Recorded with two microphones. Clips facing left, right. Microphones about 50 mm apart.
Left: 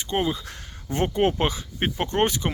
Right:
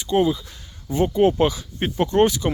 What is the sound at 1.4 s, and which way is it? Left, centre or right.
Speech, left.